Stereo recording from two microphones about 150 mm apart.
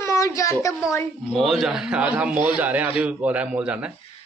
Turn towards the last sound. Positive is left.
turn(degrees=-10)  # may be behind; listen again after turning